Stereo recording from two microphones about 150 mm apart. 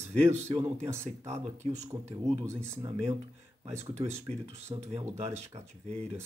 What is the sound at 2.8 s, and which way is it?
Speech, 25° right (ahead or behind).